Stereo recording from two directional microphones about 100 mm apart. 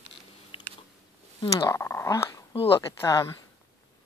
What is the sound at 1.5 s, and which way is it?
Speech, 30° left (ahead or behind).